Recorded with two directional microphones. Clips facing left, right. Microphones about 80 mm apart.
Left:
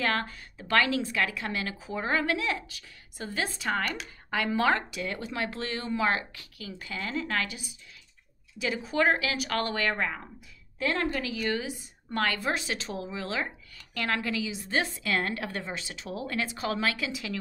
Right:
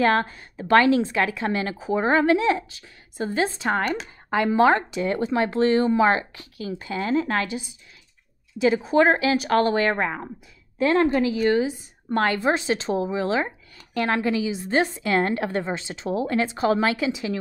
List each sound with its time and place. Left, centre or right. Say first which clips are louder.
0.0 s a woman's voice: right 9 dB; right